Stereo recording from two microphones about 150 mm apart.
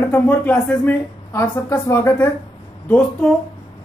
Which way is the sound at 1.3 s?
20° left (ahead or behind).